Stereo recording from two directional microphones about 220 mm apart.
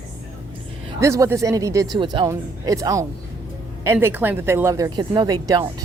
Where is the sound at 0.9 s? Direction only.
15° right (ahead or behind).